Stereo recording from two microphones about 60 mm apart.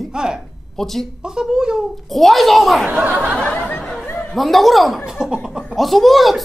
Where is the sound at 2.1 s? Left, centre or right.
Centre.